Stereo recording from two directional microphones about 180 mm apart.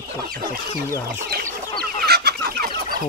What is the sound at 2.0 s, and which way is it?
Chicken, 60° right (ahead or behind).